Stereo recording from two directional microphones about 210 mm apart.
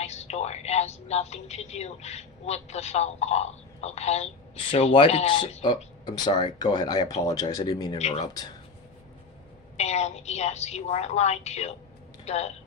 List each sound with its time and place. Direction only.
0.0 s a woman's voice: 30° left (ahead or behind)
7.9 s a woman's voice: 30° left (ahead or behind)
8.2 s speech: 20° left (ahead or behind)
9.7 s a woman's voice: 30° left (ahead or behind)